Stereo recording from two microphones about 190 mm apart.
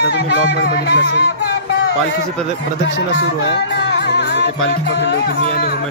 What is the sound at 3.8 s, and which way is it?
Music, 65° left (ahead or behind).